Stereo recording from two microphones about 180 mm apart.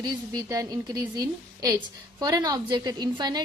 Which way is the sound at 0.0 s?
20° right (ahead or behind).